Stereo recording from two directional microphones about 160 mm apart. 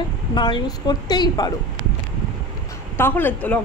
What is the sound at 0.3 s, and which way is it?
A woman's voice, 25° left (ahead or behind).